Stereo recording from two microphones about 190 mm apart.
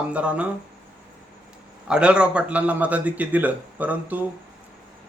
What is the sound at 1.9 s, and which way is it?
A man's voice, 5° right (ahead or behind).